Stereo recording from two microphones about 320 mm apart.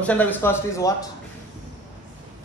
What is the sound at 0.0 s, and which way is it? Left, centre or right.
Speech, centre.